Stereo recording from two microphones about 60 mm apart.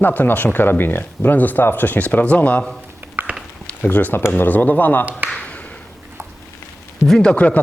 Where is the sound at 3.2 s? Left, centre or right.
Right.